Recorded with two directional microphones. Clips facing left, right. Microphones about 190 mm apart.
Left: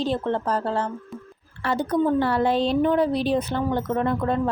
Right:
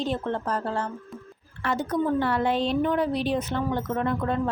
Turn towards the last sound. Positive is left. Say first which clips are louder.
# left 3 dB
turn(degrees=35)  # may be behind; listen again after turning